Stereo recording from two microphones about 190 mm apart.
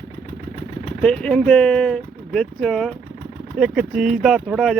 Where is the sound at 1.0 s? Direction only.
5° left (ahead or behind).